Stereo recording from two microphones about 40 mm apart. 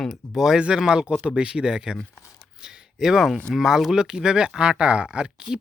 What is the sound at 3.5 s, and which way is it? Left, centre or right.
Speech, centre.